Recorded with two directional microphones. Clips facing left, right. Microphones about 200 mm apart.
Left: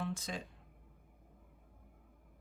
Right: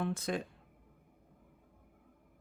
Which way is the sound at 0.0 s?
60° right (ahead or behind).